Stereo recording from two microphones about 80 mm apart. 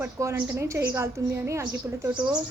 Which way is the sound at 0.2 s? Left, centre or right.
Right.